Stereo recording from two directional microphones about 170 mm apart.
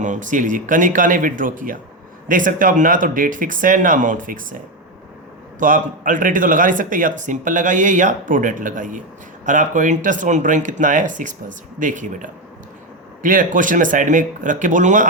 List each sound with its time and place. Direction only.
0.0 s speech: 50° right (ahead or behind)